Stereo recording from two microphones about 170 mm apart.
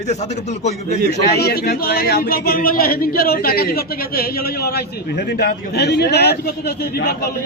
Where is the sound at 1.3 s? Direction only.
65° left (ahead or behind).